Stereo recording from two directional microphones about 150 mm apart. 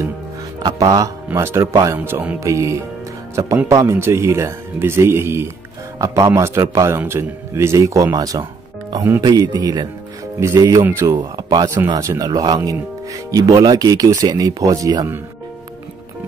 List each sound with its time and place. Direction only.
0.6 s speech: 25° right (ahead or behind)
11.1 s speech: 25° right (ahead or behind)